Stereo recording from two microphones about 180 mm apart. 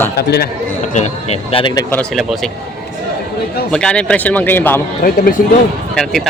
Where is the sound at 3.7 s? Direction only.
5° left (ahead or behind).